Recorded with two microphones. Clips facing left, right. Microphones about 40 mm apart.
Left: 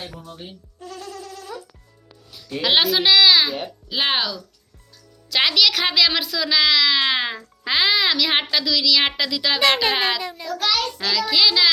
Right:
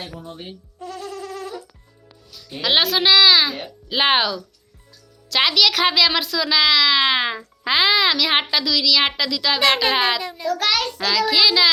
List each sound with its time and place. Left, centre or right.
0.0 s speech: right
0.9 s a sound: centre
1.3 s music: right
2.6 s a woman's voice: centre
3.8 s speech: centre
5.3 s a woman's voice: centre